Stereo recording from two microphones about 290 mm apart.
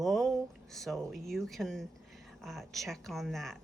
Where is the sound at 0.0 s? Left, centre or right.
Centre.